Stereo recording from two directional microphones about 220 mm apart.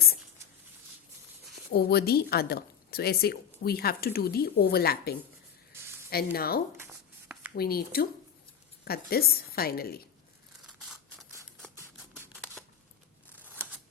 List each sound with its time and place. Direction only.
1.7 s a woman's voice: 45° left (ahead or behind)
6.7 s a sound: 10° right (ahead or behind)
7.5 s a woman's voice: 45° left (ahead or behind)
10.8 s scissors: centre (ahead or behind)
13.3 s scissors: 10° right (ahead or behind)